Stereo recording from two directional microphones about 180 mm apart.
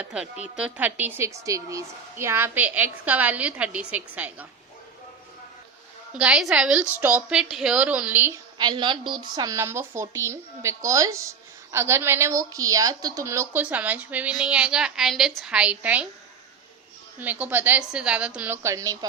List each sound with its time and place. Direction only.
0.0 s a woman's voice: 5° right (ahead or behind)
6.1 s a woman's voice: 5° right (ahead or behind)
8.5 s a woman's voice: 25° right (ahead or behind); by 16.0 s 10° right (ahead or behind)
17.2 s a woman's voice: 10° right (ahead or behind)